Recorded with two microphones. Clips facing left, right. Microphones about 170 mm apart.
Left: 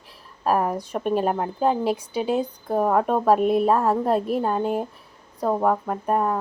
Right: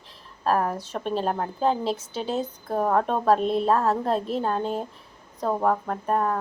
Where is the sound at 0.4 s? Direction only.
10° left (ahead or behind).